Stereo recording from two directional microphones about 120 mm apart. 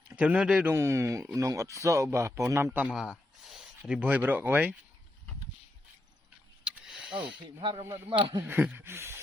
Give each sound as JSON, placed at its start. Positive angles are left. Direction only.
{"t": 0.2, "sound": "a man's voice", "side_deg": -10}
{"t": 0.7, "sound": "speech", "side_deg": -20}
{"t": 2.9, "sound": "speech", "side_deg": 0}
{"t": 6.7, "sound": "a sound", "side_deg": -10}
{"t": 7.8, "sound": "speech", "side_deg": -25}
{"t": 8.1, "sound": "a man's voice", "side_deg": -15}